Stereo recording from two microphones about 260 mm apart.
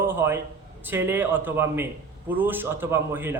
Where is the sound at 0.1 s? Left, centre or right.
Centre.